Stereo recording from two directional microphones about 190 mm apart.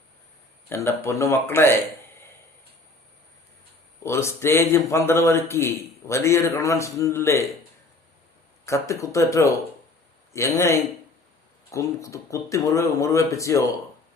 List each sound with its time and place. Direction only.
0.7 s a man's voice: 15° left (ahead or behind)
4.0 s a man's voice: 15° left (ahead or behind)
8.6 s a man's voice: 15° left (ahead or behind)
10.3 s a man's voice: 15° left (ahead or behind)